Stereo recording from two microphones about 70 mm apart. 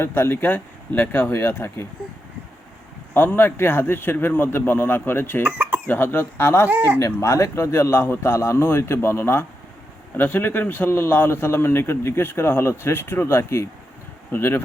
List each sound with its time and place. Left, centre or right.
0.0 s a man's voice: left
3.2 s a man's voice: left
5.4 s speech: right
5.9 s a man's voice: left
6.7 s speech: right
7.0 s a man's voice: left
10.2 s a man's voice: left
14.3 s speech: left